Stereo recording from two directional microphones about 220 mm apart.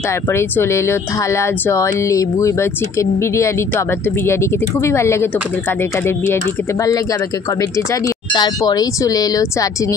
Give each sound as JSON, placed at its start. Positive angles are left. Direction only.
{"t": 0.3, "sound": "speech", "side_deg": 10}